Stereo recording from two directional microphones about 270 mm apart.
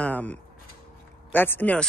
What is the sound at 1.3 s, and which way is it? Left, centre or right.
Speech, centre.